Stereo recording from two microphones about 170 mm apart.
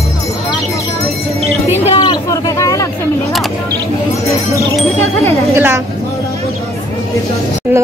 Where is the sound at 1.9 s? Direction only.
25° left (ahead or behind).